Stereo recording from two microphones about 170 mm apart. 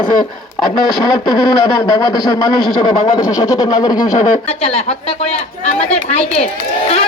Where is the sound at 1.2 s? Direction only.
20° left (ahead or behind).